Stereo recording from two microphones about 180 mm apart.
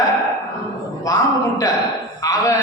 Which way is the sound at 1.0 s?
20° left (ahead or behind).